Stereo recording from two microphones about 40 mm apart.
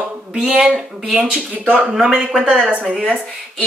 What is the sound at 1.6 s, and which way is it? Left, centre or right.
Speech, right.